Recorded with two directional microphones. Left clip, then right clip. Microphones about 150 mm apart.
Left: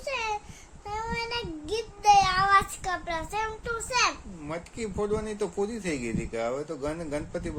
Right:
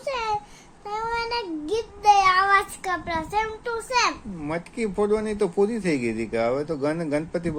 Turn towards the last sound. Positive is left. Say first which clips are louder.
# right 7 dB
turn(degrees=-40)  # may be behind; listen again after turning